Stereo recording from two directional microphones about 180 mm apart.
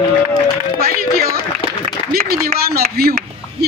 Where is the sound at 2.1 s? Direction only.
55° right (ahead or behind).